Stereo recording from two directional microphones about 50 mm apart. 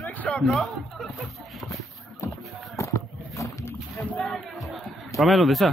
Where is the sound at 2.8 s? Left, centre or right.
Left.